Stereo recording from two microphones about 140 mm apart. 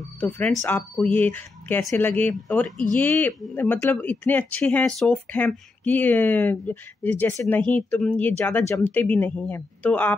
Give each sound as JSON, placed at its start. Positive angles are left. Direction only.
{"t": 0.2, "sound": "speech", "side_deg": 10}